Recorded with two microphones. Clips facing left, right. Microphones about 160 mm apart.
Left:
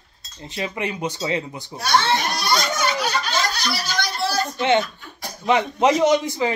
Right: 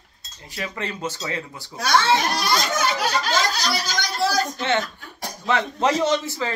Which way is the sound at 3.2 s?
90° right.